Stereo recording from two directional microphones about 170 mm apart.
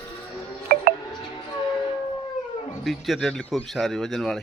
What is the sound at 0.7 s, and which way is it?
Music, 55° right (ahead or behind).